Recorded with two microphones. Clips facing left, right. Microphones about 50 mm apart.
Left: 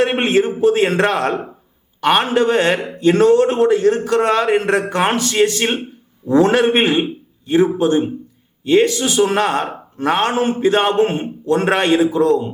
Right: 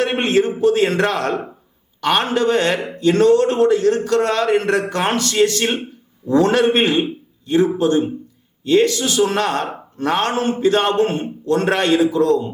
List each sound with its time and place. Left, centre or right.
0.0 s a man's voice: centre